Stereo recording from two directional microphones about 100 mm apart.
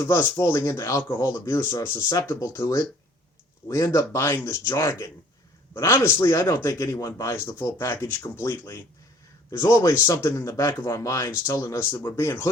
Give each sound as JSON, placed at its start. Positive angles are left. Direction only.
{"t": 0.0, "sound": "speech", "side_deg": 30}